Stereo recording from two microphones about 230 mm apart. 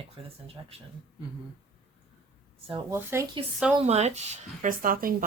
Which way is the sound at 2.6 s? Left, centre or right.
Right.